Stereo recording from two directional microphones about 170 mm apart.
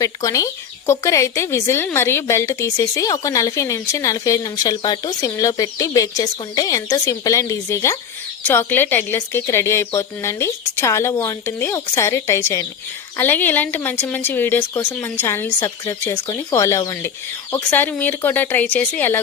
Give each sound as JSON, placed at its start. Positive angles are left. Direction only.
{"t": 0.0, "sound": "speech", "side_deg": 20}